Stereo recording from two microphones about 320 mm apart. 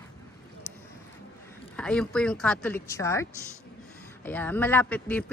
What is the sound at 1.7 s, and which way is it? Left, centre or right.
Speech, centre.